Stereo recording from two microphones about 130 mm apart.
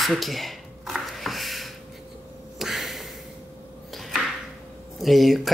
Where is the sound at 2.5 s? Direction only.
Centre (ahead or behind).